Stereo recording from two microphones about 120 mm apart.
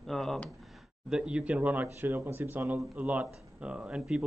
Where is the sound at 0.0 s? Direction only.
Centre (ahead or behind).